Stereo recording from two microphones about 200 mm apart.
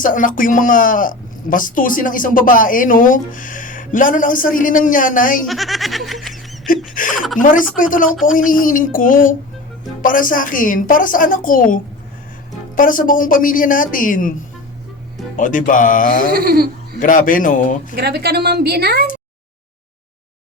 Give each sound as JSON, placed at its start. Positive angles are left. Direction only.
{"t": 0.0, "sound": "speech", "side_deg": 40}
{"t": 5.5, "sound": "a sound", "side_deg": 0}
{"t": 6.9, "sound": "speech", "side_deg": 40}
{"t": 7.4, "sound": "music", "side_deg": 40}
{"t": 8.3, "sound": "speech", "side_deg": 45}
{"t": 15.4, "sound": "music", "side_deg": 40}
{"t": 16.3, "sound": "speech", "side_deg": -50}
{"t": 17.0, "sound": "music", "side_deg": 40}
{"t": 17.9, "sound": "a woman's voice", "side_deg": -55}